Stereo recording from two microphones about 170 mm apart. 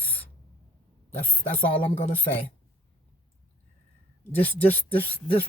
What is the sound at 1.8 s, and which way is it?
Speech, 35° left (ahead or behind).